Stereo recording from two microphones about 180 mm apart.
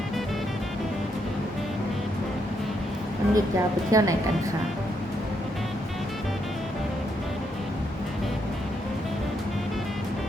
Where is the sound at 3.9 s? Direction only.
20° right (ahead or behind).